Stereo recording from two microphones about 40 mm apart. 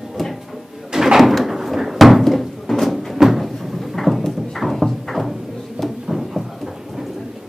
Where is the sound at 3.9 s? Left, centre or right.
Centre.